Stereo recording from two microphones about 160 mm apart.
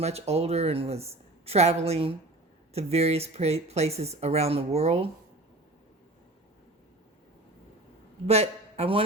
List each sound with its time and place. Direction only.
0.0 s speech: 40° right (ahead or behind)
8.3 s speech: 40° right (ahead or behind)